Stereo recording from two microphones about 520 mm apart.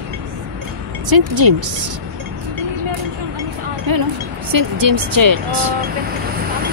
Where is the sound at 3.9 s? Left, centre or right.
Right.